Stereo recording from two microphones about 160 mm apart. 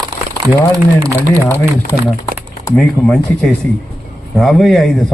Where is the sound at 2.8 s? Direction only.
Centre (ahead or behind).